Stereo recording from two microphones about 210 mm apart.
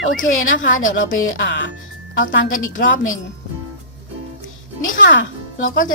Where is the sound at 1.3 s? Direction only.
55° left (ahead or behind).